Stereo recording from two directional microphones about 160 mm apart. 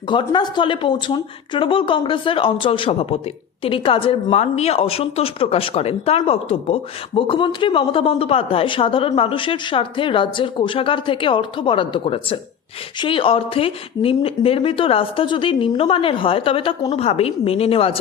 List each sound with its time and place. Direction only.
0.1 s speech: 30° left (ahead or behind)